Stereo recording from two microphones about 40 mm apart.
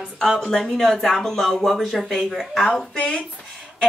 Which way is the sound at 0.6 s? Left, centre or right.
Centre.